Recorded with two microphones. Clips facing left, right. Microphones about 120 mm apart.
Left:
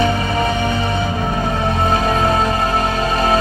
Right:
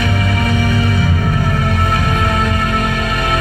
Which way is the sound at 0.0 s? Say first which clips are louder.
Left 1 dB; 30° left (ahead or behind).